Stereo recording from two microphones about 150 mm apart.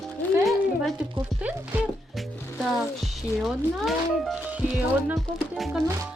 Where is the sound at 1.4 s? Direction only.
10° right (ahead or behind).